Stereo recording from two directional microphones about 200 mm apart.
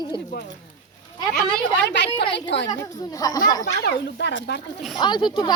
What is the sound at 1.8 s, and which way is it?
Speech, 60° left (ahead or behind).